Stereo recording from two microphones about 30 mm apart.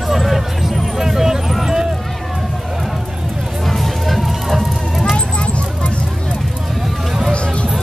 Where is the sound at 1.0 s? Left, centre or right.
Centre.